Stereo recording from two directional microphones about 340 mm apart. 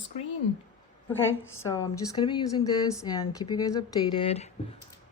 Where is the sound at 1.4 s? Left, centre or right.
Left.